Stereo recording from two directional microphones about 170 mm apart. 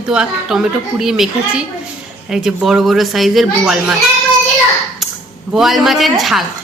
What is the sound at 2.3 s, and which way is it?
A woman's voice, 5° right (ahead or behind).